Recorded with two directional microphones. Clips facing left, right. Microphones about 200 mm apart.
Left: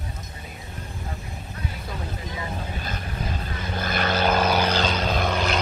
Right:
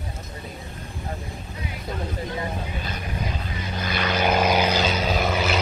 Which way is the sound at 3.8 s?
50° left (ahead or behind).